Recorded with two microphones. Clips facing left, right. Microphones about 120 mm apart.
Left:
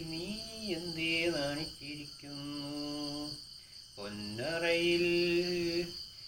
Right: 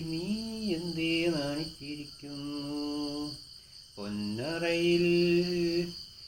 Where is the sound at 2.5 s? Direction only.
35° right (ahead or behind).